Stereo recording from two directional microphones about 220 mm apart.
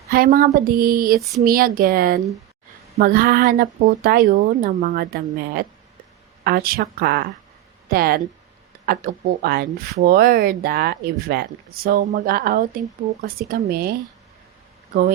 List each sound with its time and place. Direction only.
0.1 s speech: 40° right (ahead or behind)